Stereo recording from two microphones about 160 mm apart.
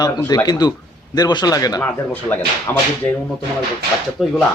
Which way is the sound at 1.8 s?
10° left (ahead or behind).